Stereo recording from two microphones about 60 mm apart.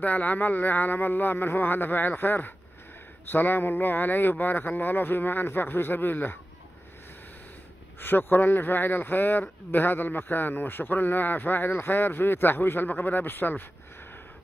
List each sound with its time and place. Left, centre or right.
0.0 s a man's voice: left
8.0 s a man's voice: left